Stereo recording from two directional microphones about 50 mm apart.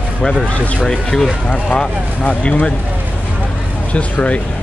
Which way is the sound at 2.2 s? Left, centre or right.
Left.